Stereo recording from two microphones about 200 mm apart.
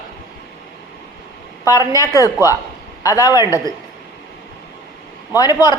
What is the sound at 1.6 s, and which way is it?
A woman's voice, 15° left (ahead or behind).